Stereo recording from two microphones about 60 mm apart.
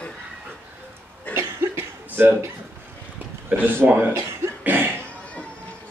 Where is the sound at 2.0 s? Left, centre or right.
Right.